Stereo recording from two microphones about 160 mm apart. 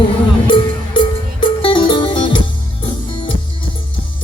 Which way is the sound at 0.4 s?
30° left (ahead or behind).